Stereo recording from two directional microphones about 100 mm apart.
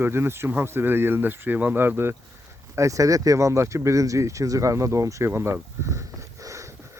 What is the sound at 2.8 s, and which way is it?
Speech, 35° right (ahead or behind).